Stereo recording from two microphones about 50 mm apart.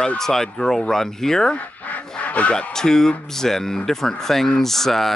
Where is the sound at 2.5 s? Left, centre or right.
Centre.